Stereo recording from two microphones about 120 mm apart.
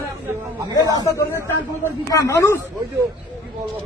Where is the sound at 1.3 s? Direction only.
20° right (ahead or behind).